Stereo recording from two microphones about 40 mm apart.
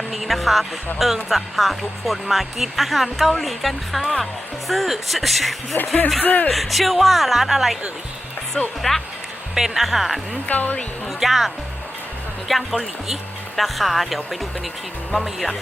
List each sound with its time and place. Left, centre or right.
0.1 s speech: centre
5.7 s speech: left
6.5 s speech: centre
8.6 s speech: left
9.6 s speech: centre
10.5 s speech: left
11.2 s speech: centre